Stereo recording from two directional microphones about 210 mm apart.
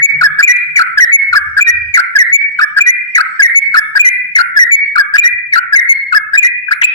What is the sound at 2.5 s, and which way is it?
Whistle, 15° left (ahead or behind).